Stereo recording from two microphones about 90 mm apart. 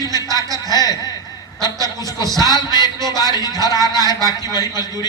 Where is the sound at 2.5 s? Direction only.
50° left (ahead or behind).